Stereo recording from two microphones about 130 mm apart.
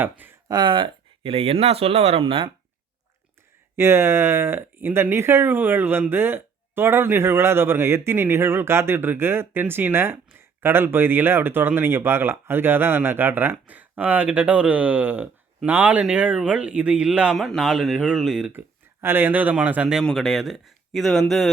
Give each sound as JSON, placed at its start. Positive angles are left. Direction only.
{"t": 0.0, "sound": "speech", "side_deg": -15}
{"t": 0.4, "sound": "speech", "side_deg": -35}
{"t": 3.8, "sound": "speech", "side_deg": -20}
{"t": 19.0, "sound": "speech", "side_deg": -15}